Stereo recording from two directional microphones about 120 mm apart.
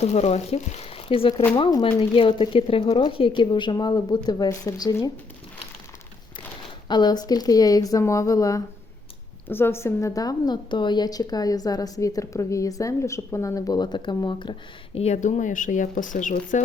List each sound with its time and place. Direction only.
0.0 s a woman's voice: 65° left (ahead or behind); by 5.1 s 30° left (ahead or behind)
6.8 s a woman's voice: 35° left (ahead or behind)
9.5 s a woman's voice: 20° left (ahead or behind); by 14.5 s 40° left (ahead or behind)
14.9 s speech: 65° left (ahead or behind); by 16.6 s 90° left